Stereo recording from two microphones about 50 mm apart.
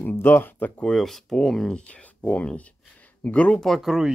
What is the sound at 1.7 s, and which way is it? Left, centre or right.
Speech, left.